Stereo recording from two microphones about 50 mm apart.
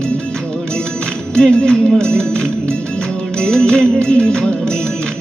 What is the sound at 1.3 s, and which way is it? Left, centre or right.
Music, centre.